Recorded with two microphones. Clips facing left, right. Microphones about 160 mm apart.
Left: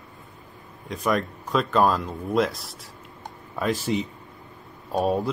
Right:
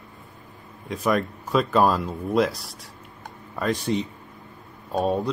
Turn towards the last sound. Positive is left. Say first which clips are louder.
# even
turn(degrees=0)  # may be behind; listen again after turning